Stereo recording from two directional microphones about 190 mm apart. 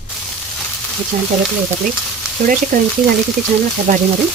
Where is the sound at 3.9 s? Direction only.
45° right (ahead or behind).